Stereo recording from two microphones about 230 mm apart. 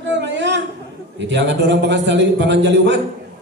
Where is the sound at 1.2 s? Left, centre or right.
Right.